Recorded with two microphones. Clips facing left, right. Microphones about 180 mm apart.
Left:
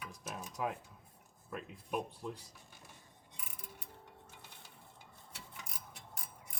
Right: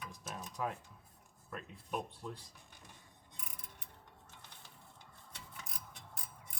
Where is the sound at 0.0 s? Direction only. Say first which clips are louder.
Left 1 dB; 10° left (ahead or behind).